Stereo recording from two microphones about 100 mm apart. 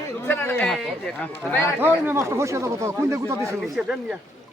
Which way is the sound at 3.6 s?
5° right (ahead or behind).